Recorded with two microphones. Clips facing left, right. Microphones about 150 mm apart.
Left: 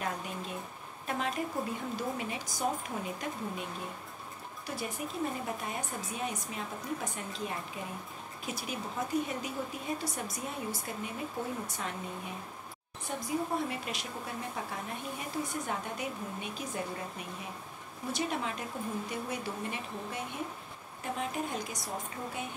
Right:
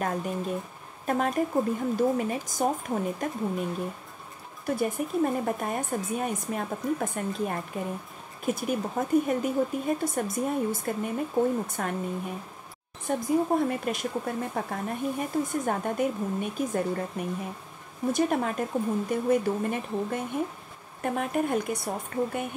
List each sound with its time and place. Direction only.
0.0 s speech: 45° right (ahead or behind)
4.6 s speech: 50° right (ahead or behind)
13.2 s a woman's voice: 50° right (ahead or behind)